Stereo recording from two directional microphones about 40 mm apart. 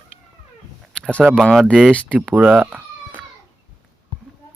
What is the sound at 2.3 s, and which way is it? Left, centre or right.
Speech, right.